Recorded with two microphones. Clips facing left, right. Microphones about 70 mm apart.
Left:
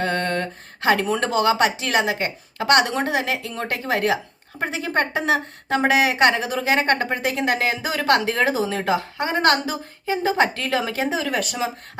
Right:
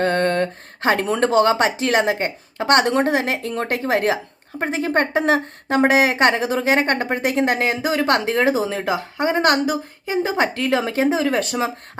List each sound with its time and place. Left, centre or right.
0.0 s a sound: right
0.9 s a woman's voice: right
8.7 s a woman's voice: centre; by 11.7 s right